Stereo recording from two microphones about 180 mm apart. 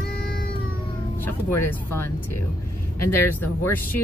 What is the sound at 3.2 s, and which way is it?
Speech, 10° left (ahead or behind).